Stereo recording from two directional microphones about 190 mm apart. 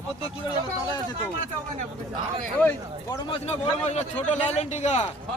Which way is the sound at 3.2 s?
30° left (ahead or behind).